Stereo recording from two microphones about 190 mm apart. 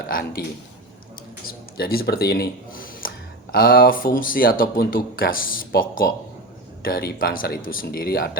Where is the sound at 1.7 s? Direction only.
55° left (ahead or behind).